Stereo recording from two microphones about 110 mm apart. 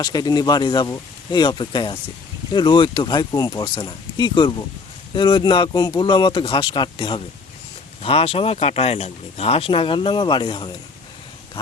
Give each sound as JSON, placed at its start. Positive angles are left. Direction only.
{"t": 0.0, "sound": "speech", "side_deg": 40}
{"t": 3.6, "sound": "speech", "side_deg": 45}
{"t": 8.0, "sound": "speech", "side_deg": 60}